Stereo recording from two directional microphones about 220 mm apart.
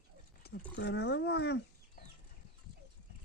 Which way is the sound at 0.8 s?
50° left (ahead or behind).